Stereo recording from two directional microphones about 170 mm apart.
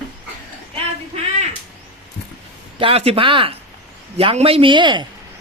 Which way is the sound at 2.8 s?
35° right (ahead or behind).